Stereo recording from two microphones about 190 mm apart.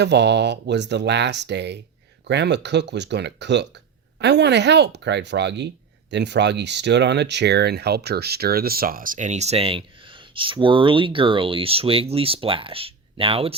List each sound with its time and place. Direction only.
0.0 s speech: 65° right (ahead or behind); by 13.6 s 30° right (ahead or behind)